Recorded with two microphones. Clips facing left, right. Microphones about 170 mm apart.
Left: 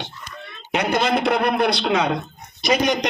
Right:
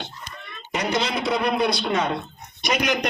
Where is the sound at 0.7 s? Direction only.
60° left (ahead or behind); by 2.1 s 80° left.